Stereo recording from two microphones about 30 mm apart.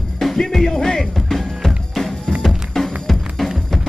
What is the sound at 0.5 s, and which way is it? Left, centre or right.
Music, centre.